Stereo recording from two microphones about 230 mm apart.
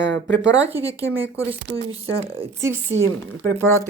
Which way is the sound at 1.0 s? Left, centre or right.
Right.